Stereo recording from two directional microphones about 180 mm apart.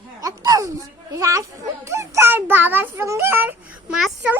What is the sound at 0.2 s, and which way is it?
A child's voice, 20° right (ahead or behind).